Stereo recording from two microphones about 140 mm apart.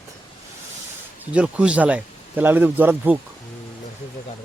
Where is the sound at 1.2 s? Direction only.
10° right (ahead or behind).